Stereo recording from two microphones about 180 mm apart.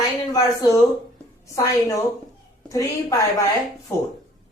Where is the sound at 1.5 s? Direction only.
15° left (ahead or behind).